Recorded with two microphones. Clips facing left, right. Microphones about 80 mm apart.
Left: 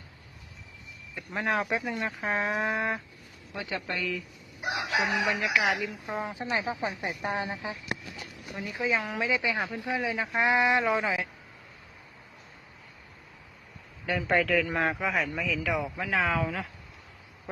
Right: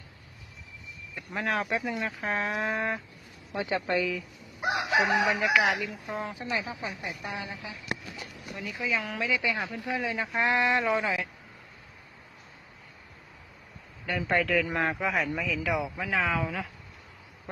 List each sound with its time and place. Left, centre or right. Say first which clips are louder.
1.1 s speech: left 1 dB; centre
3.5 s a woman's voice: right 6 dB; right
4.7 s chicken: right 3 dB; right
5.5 s speech: right 1 dB; centre
6.1 s speech: left 2 dB; left
10.2 s speech: left 2 dB; centre
14.1 s speech: left 1 dB; centre